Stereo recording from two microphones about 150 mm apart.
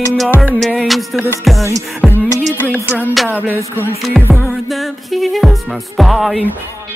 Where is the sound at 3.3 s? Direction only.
15° left (ahead or behind).